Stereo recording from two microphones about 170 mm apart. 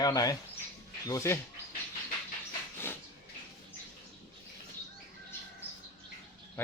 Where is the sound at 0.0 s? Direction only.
20° left (ahead or behind).